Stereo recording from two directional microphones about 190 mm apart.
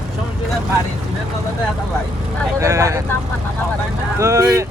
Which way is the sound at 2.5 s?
15° right (ahead or behind).